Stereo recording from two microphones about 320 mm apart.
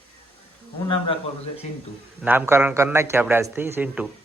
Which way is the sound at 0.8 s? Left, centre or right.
Centre.